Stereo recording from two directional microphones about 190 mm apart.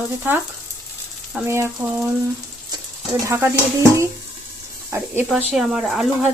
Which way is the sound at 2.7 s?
15° right (ahead or behind).